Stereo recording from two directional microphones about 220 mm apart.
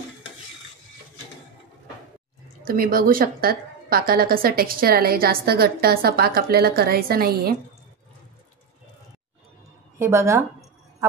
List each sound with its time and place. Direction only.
2.6 s a woman's voice: 40° right (ahead or behind)
9.9 s a woman's voice: 10° right (ahead or behind)